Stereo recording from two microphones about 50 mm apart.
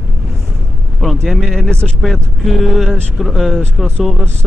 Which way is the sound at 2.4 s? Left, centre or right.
Centre.